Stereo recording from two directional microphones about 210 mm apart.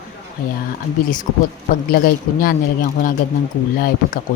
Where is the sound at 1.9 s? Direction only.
45° left (ahead or behind).